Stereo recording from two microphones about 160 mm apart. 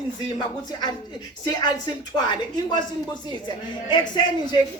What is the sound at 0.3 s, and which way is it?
Speech, 25° left (ahead or behind).